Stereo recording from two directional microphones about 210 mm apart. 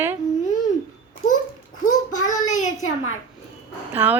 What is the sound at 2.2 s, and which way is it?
Child singing, 35° left (ahead or behind).